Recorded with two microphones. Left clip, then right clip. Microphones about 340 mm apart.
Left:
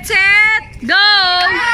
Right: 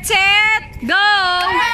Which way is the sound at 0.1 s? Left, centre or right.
Centre.